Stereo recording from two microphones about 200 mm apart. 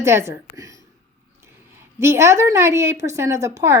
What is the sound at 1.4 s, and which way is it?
A woman's voice, 15° right (ahead or behind).